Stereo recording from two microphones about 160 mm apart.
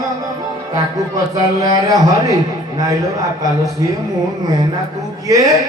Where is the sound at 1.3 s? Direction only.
20° right (ahead or behind).